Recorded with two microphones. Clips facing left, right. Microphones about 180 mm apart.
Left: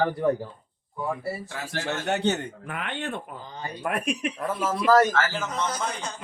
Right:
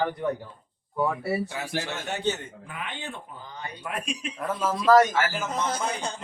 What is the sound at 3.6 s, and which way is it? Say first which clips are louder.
Speech: left 5 dB; 55° left (ahead or behind).